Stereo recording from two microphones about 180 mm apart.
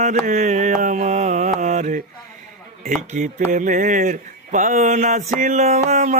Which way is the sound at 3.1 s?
45° right (ahead or behind).